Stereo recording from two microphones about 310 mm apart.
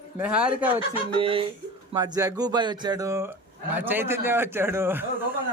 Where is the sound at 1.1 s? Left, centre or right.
Centre.